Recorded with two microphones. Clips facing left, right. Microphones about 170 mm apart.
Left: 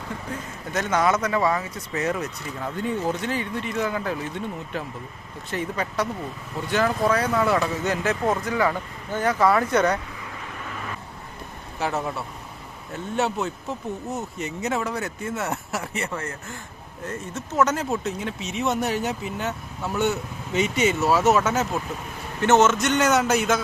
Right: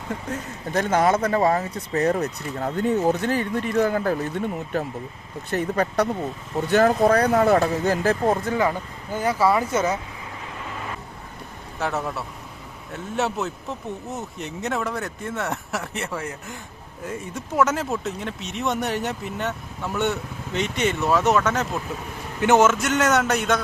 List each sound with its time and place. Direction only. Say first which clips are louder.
0.3 s speech: right 3 dB; 35° right (ahead or behind)
6.6 s speech: right 5 dB; 45° right (ahead or behind)
9.1 s speech: even; 10° right (ahead or behind)
11.8 s speech: even; centre (ahead or behind)
22.4 s speech: right 1 dB; 10° right (ahead or behind)